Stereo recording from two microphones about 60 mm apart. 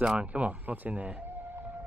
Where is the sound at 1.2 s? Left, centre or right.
Right.